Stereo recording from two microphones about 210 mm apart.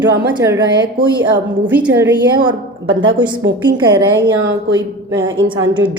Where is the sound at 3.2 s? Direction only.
20° right (ahead or behind).